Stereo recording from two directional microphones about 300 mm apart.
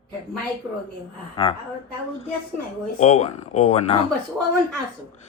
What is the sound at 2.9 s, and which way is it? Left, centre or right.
Speech, left.